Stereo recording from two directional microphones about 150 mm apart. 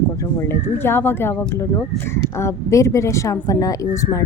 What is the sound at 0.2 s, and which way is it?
A woman's voice, 20° left (ahead or behind).